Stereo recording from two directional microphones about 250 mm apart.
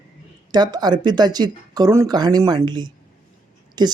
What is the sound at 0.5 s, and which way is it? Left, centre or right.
Speech, centre.